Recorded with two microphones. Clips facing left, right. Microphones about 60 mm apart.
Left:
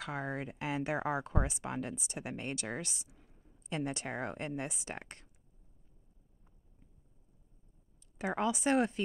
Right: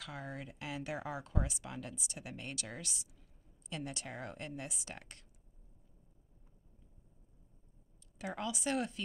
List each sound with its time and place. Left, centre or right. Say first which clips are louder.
0.0 s speech: left 7 dB; left
8.2 s speech: left 7 dB; left